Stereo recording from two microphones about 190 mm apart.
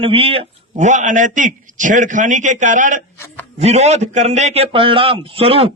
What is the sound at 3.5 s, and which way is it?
A man's voice, 35° right (ahead or behind).